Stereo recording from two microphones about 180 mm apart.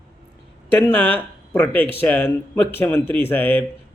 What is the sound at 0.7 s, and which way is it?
Speech, 10° left (ahead or behind).